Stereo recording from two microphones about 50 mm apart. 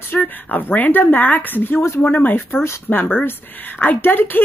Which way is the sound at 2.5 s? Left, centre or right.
Left.